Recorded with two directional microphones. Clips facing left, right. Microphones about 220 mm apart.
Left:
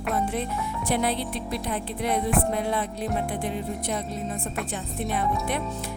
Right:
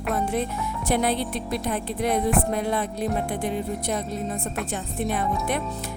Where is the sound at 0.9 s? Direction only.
45° right (ahead or behind).